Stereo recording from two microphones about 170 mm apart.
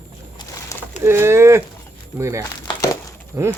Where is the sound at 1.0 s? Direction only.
15° right (ahead or behind).